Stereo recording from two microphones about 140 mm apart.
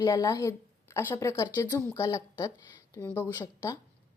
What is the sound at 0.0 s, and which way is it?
Speech, 25° left (ahead or behind).